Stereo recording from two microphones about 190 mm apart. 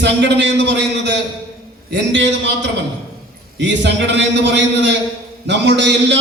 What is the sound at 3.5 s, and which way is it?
Speech, 70° right (ahead or behind).